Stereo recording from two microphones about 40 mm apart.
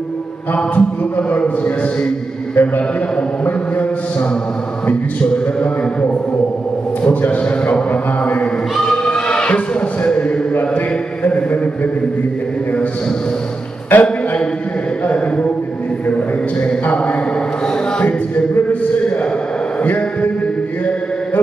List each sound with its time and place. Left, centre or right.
0.7 s speech: left
7.9 s speech: left
8.8 s choir: centre
9.5 s speech: left
10.5 s mantra: left
11.2 s speech: left
13.9 s a man's voice: left
15.1 s speech: left
18.0 s speech: left
19.8 s a sound: left